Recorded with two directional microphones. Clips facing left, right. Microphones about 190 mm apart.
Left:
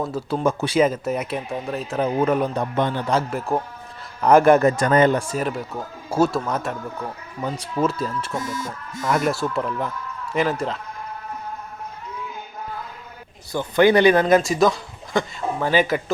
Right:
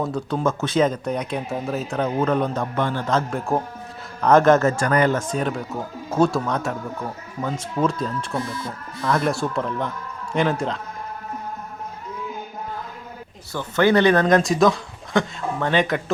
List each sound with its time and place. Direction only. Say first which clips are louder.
0.0 s speech: even; 5° left (ahead or behind)
2.0 s a man's voice: left 2 dB; 10° left (ahead or behind)
5.2 s speech: right 1 dB; 5° left (ahead or behind)
7.8 s speech: even; 5° left (ahead or behind)
13.5 s speech: left 2 dB; 15° left (ahead or behind)